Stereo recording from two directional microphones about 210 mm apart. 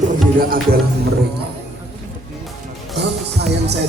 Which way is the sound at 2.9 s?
50° right (ahead or behind).